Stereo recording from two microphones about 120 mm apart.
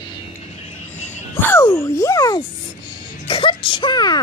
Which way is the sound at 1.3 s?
20° left (ahead or behind).